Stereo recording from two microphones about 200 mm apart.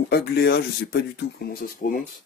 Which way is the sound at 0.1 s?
55° left (ahead or behind).